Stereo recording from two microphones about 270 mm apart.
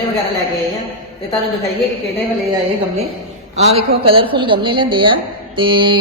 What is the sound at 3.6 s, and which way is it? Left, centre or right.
Speech, right.